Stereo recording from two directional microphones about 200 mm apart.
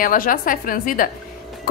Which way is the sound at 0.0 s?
45° left (ahead or behind).